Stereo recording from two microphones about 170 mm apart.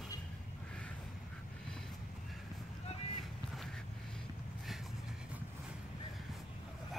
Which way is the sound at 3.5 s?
Centre (ahead or behind).